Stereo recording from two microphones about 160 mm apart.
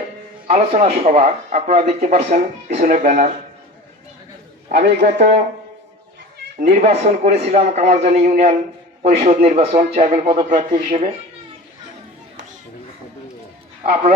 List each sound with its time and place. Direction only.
0.5 s a man's voice: 40° right (ahead or behind)
4.7 s a man's voice: 75° right (ahead or behind)
5.0 s a man's voice: 45° right (ahead or behind)
6.6 s a man's voice: 45° right (ahead or behind)
10.1 s speech: 30° right (ahead or behind)
10.5 s a man's voice: 50° right (ahead or behind)